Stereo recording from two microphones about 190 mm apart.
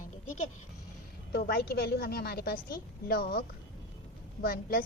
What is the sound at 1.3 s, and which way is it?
A woman's voice, 55° left (ahead or behind).